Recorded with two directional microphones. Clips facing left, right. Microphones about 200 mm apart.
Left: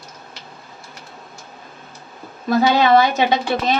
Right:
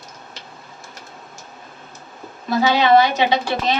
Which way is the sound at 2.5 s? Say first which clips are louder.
Left 1 dB; 50° left (ahead or behind).